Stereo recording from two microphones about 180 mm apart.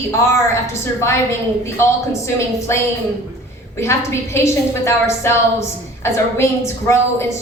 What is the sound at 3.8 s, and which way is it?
A woman's voice, 15° left (ahead or behind).